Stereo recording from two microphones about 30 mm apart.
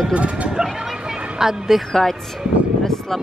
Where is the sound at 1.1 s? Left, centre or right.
Centre.